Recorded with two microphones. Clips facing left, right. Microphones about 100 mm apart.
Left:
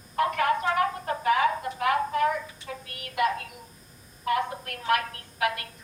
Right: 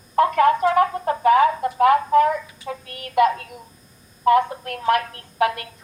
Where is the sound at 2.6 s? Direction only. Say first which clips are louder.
Right 7 dB; 35° right (ahead or behind).